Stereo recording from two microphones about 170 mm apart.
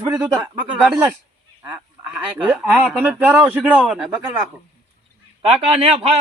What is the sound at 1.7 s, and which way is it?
Speech, 10° right (ahead or behind).